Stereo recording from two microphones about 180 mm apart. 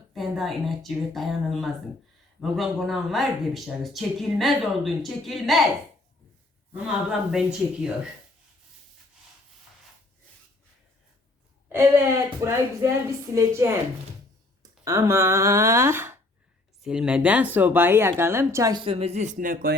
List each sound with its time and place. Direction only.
0.1 s speech: centre (ahead or behind)
6.7 s speech: 5° right (ahead or behind)
11.7 s a woman's voice: 15° right (ahead or behind)
18.9 s speech: 35° right (ahead or behind); by 19.7 s 50° right (ahead or behind)